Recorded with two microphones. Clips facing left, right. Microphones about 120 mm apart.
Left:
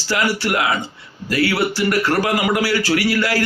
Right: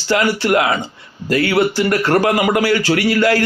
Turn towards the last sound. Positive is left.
turn(degrees=-25)  # may be behind; listen again after turning